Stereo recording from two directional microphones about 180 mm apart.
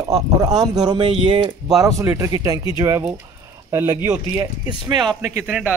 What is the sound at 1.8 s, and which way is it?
A man's voice, 15° right (ahead or behind).